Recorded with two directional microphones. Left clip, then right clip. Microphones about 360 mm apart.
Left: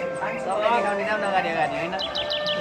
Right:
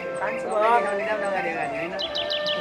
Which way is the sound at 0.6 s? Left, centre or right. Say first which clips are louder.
Right 1 dB; centre.